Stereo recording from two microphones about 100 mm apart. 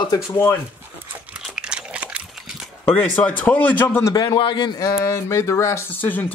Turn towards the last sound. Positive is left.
turn(degrees=20)  # may be behind; listen again after turning